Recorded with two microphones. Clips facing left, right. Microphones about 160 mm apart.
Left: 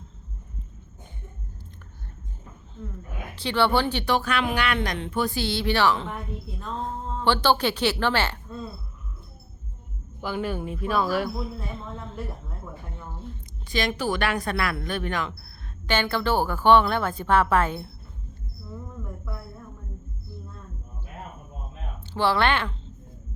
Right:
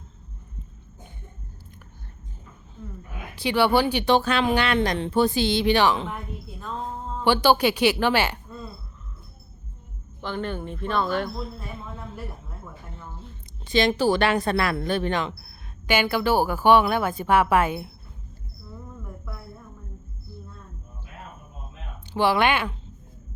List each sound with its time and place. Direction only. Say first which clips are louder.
3.3 s a woman's voice: right 2 dB; 10° right (ahead or behind)
4.0 s speech: right 4 dB; 25° right (ahead or behind)
7.3 s a woman's voice: right 3 dB; 10° right (ahead or behind)
10.2 s speech: left 1 dB; 10° left (ahead or behind)
11.8 s a woman's voice: left 1 dB; 5° right (ahead or behind)
13.7 s speech: right 6 dB; 25° right (ahead or behind)
15.9 s a woman's voice: right 2 dB; 10° right (ahead or behind)
22.1 s a woman's voice: right 2 dB; 15° right (ahead or behind)